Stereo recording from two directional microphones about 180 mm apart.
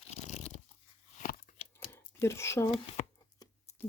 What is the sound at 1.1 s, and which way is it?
Biting, 45° left (ahead or behind).